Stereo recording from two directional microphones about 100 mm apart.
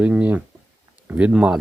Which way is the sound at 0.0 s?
15° right (ahead or behind).